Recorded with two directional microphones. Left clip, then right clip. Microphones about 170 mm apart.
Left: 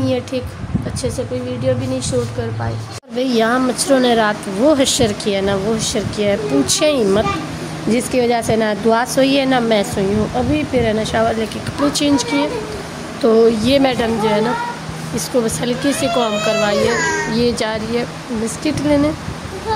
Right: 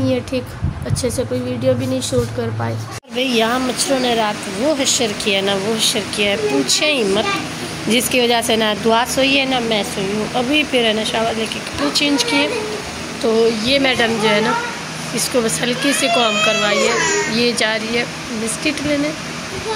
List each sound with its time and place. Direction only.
1.7 s speech: 10° right (ahead or behind)
3.2 s speech: 25° left (ahead or behind)
3.8 s speech: 45° left (ahead or behind)
5.2 s speech: 30° left (ahead or behind)
7.9 s speech: 20° left (ahead or behind)
9.1 s speech: 40° left (ahead or behind)
10.5 s speech: 15° left (ahead or behind)
11.8 s speech: 35° left (ahead or behind)
12.2 s speech: 25° left (ahead or behind)
13.2 s speech: 40° left (ahead or behind)
13.8 s speech: 20° left (ahead or behind)